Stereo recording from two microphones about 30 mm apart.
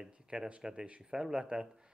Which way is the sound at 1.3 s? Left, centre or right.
Right.